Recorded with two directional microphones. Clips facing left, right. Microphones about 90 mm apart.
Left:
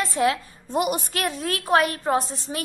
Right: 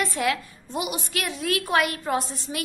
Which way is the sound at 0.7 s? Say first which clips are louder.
Left 6 dB; 45° left (ahead or behind).